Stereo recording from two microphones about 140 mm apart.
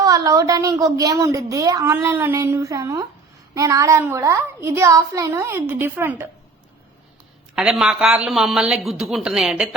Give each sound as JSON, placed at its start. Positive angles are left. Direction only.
{"t": 0.0, "sound": "a woman's voice", "side_deg": -25}
{"t": 7.5, "sound": "speech", "side_deg": -5}